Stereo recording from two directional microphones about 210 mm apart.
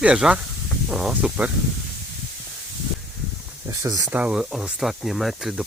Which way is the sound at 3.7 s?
15° right (ahead or behind).